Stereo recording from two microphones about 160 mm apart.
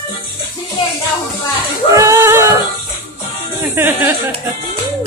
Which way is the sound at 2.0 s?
20° right (ahead or behind).